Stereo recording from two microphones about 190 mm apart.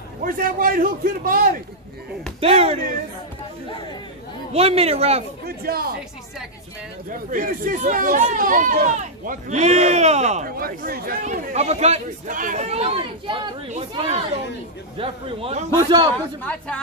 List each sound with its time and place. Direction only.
0.2 s speech: 50° right (ahead or behind)
2.4 s a child's voice: 30° right (ahead or behind)
4.5 s a child's voice: 30° right (ahead or behind)
5.4 s speech: 55° right (ahead or behind)
7.1 s speech: 45° right (ahead or behind)
11.5 s a child's voice: 35° right (ahead or behind)
16.4 s a woman's voice: 5° left (ahead or behind)